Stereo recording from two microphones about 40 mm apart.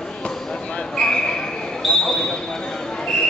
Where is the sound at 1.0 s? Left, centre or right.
Centre.